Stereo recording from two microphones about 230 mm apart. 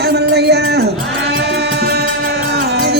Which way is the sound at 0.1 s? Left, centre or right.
Right.